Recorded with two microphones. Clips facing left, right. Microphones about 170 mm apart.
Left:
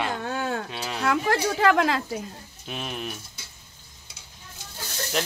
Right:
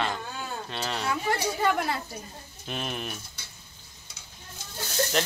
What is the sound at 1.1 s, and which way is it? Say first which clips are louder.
A woman's voice: left 6 dB; 90° left.